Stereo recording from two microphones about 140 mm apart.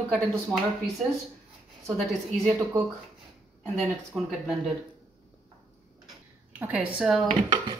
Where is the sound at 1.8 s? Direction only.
5° left (ahead or behind).